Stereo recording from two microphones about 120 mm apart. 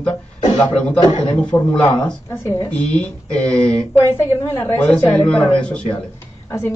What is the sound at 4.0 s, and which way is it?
Speech, 20° left (ahead or behind).